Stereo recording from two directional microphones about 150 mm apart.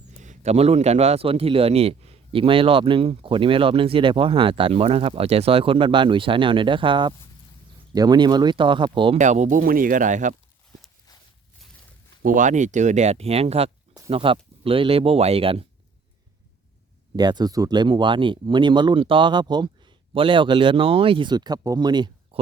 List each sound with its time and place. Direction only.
0.2 s speech: 50° right (ahead or behind); by 9.1 s 35° right (ahead or behind)
9.1 s speech: 55° right (ahead or behind)
12.2 s speech: 60° right (ahead or behind); by 15.6 s 40° right (ahead or behind)
17.2 s speech: 25° right (ahead or behind)